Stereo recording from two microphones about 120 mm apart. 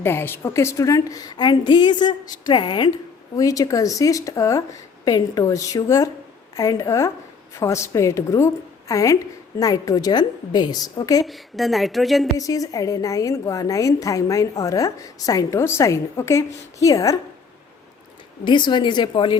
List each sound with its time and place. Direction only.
0.0 s a woman's voice: 20° left (ahead or behind); by 2.9 s 40° left (ahead or behind)
3.3 s a woman's voice: 30° left (ahead or behind)
11.3 s a woman's voice: centre (ahead or behind)
12.4 s a woman's voice: 30° left (ahead or behind)
18.4 s a woman's voice: 40° left (ahead or behind)